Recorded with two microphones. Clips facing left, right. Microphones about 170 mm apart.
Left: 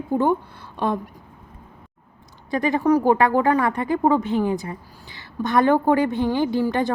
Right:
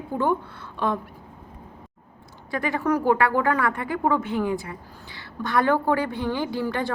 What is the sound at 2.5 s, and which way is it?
A woman's voice, 20° left (ahead or behind).